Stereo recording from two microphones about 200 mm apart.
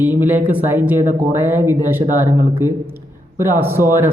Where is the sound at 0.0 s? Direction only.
10° right (ahead or behind).